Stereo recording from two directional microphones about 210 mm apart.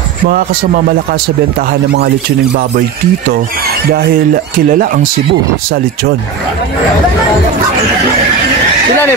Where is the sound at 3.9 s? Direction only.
40° right (ahead or behind).